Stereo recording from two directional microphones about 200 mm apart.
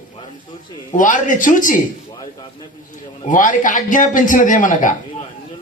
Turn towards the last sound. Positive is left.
turn(degrees=40)  # may be behind; listen again after turning